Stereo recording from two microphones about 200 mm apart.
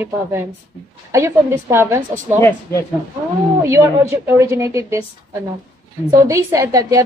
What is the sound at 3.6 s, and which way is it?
A woman's voice, 15° right (ahead or behind).